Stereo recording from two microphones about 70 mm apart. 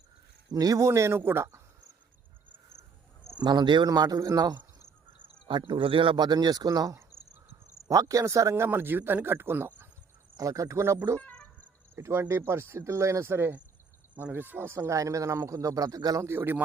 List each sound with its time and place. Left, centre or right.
0.5 s speech: right
3.3 s speech: right
6.1 s speech: right
10.3 s speech: right
11.2 s music: centre
11.9 s speech: right
14.7 s a man's voice: right
16.2 s speech: right